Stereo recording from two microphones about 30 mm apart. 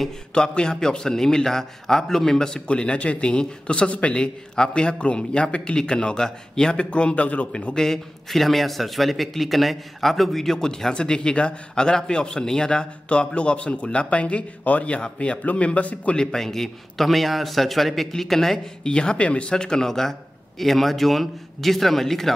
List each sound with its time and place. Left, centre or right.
0.3 s a man's voice: left
2.7 s a man's voice: left
6.8 s a man's voice: left
7.7 s a man's voice: centre
8.3 s a man's voice: centre; by 12.8 s left
13.1 s a man's voice: left
15.0 s a man's voice: left
15.5 s speech: left
16.3 s a man's voice: centre
18.9 s a man's voice: left
19.5 s a man's voice: left; by 22.3 s centre